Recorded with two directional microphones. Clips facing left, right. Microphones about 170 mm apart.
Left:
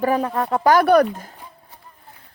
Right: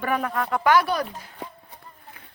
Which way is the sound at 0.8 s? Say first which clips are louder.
Left 12 dB; 55° left (ahead or behind).